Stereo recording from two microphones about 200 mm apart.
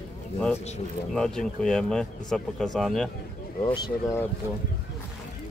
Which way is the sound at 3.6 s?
20° left (ahead or behind).